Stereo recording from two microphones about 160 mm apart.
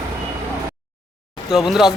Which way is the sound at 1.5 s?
Centre (ahead or behind).